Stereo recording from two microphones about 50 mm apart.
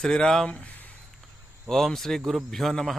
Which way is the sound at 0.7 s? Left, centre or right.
Left.